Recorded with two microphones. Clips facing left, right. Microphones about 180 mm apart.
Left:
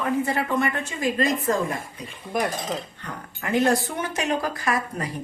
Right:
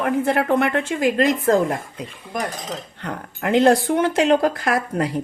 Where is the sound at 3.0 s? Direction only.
75° right (ahead or behind).